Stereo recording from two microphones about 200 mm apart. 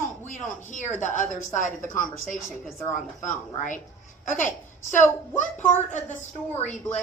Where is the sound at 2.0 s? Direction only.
5° left (ahead or behind).